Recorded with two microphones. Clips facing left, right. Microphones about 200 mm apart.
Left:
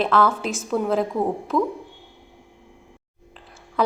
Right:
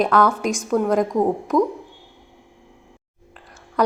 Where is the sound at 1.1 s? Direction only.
15° right (ahead or behind).